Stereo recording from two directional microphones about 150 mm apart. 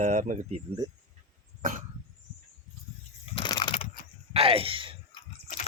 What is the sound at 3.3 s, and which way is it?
Crushing, 30° left (ahead or behind).